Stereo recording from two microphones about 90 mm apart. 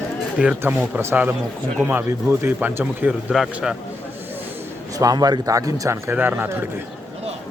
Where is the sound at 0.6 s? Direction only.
20° right (ahead or behind).